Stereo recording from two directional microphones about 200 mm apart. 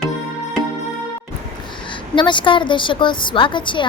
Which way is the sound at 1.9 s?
25° left (ahead or behind).